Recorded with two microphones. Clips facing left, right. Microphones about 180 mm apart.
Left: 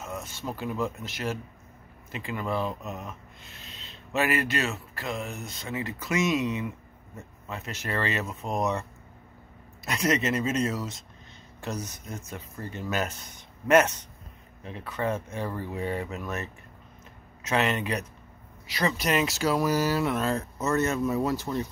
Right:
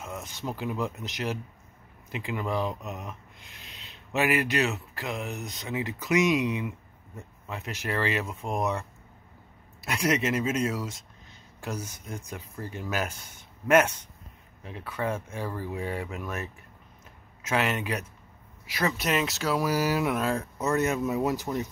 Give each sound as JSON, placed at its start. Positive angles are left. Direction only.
{"t": 0.2, "sound": "speech", "side_deg": -15}
{"t": 9.8, "sound": "speech", "side_deg": -10}